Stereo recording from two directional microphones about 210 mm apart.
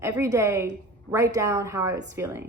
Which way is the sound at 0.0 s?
15° right (ahead or behind).